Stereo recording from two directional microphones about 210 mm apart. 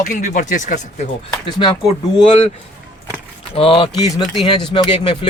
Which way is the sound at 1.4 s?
20° left (ahead or behind).